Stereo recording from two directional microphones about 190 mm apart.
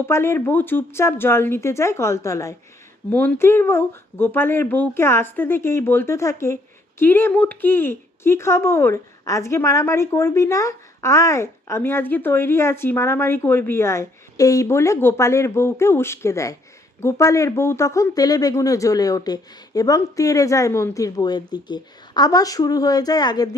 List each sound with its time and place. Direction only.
0.0 s speech: 15° left (ahead or behind)